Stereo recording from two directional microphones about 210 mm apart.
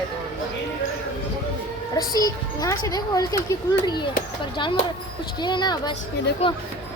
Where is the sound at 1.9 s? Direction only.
15° left (ahead or behind).